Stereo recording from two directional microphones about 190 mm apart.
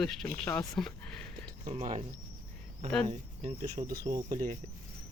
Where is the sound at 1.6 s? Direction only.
40° right (ahead or behind).